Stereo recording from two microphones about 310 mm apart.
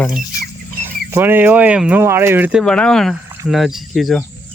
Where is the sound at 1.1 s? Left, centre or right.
Centre.